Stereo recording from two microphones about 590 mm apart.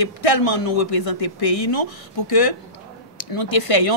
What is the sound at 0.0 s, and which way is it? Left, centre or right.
Speech, left.